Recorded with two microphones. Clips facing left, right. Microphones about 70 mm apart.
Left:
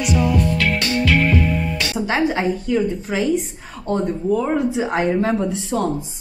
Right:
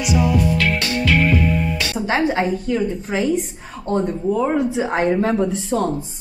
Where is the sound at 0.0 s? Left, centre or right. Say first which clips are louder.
Even; centre.